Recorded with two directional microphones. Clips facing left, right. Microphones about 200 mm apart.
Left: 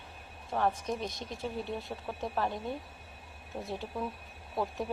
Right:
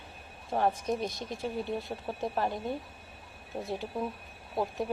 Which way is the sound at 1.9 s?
20° right (ahead or behind).